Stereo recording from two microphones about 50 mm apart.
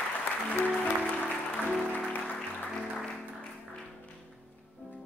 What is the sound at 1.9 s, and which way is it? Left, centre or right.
Music, left.